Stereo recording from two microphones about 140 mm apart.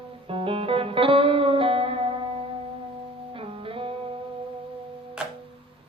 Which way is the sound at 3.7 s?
40° right (ahead or behind).